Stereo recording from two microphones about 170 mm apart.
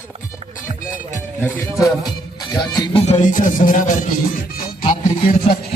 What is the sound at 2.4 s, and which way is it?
Music, 25° left (ahead or behind).